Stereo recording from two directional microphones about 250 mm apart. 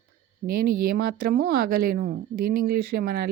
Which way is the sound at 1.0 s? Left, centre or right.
Right.